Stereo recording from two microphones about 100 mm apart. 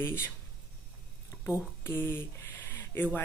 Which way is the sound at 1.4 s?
25° left (ahead or behind).